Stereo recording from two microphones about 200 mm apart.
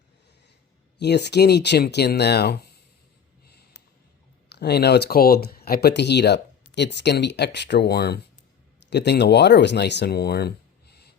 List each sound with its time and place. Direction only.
0.9 s speech: 55° left (ahead or behind)
3.4 s a sound: 55° left (ahead or behind)
4.4 s speech: 55° left (ahead or behind)